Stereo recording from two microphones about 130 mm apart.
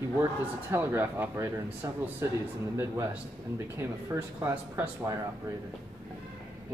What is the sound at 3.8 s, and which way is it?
Speech, 20° right (ahead or behind).